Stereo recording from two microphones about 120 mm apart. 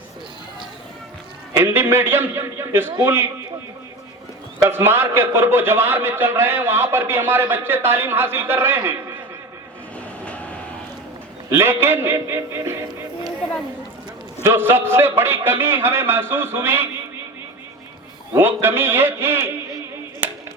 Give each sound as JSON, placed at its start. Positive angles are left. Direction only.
{"t": 1.5, "sound": "a man's voice", "side_deg": -20}
{"t": 4.6, "sound": "a man's voice", "side_deg": -20}
{"t": 10.2, "sound": "vehicle", "side_deg": 10}
{"t": 11.4, "sound": "a man's voice", "side_deg": -20}
{"t": 14.4, "sound": "a man's voice", "side_deg": -20}
{"t": 18.3, "sound": "a man's voice", "side_deg": -20}
{"t": 20.2, "sound": "clapping", "side_deg": -15}